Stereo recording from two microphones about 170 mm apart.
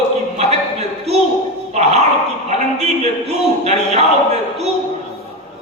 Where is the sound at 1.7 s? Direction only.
40° right (ahead or behind).